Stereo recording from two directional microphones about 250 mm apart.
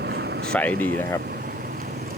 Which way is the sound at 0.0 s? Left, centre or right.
Right.